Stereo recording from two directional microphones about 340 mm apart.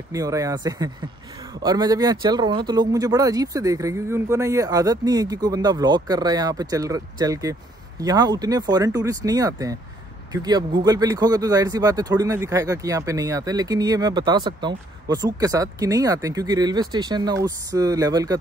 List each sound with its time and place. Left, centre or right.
0.1 s speech: centre